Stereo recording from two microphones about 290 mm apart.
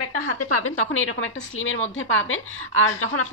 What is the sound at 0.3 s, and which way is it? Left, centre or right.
A woman's voice, left.